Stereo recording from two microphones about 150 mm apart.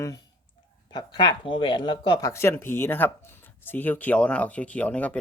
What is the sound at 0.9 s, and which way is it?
Speech, 30° left (ahead or behind).